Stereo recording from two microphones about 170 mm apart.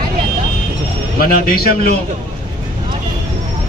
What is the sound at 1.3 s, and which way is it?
Speech, 60° left (ahead or behind).